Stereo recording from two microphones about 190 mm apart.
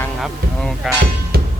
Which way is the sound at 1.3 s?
55° right (ahead or behind).